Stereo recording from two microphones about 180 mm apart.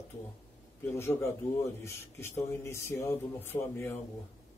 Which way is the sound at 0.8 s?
15° left (ahead or behind).